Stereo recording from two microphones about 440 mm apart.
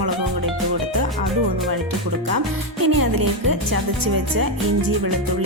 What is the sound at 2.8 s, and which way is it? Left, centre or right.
Music, right.